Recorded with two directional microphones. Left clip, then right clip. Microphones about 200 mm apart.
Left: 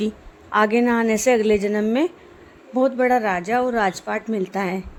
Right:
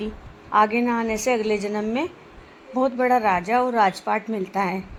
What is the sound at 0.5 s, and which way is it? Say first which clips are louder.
A woman's voice: left 1 dB; 50° left (ahead or behind).